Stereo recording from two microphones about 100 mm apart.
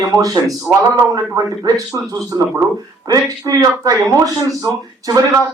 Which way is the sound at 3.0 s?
35° right (ahead or behind).